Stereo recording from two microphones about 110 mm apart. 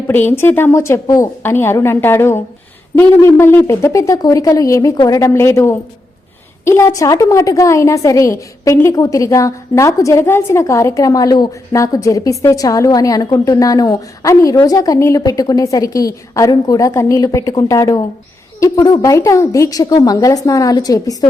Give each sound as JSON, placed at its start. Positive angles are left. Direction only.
{"t": 0.1, "sound": "a woman's voice", "side_deg": 20}
{"t": 1.4, "sound": "a woman's voice", "side_deg": 20}